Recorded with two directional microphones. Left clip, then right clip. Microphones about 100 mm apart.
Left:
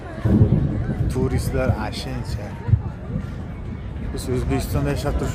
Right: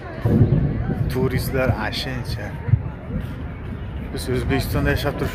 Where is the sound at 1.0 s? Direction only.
20° left (ahead or behind).